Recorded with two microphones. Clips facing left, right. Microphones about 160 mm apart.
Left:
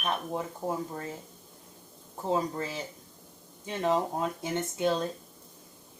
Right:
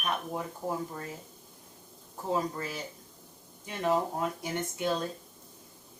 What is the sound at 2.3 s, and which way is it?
Speech, 25° left (ahead or behind).